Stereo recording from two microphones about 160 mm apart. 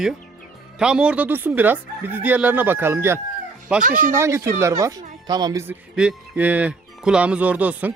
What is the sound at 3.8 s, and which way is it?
Speech, 60° right (ahead or behind).